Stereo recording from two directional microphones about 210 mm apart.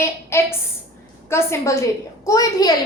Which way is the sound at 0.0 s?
10° left (ahead or behind).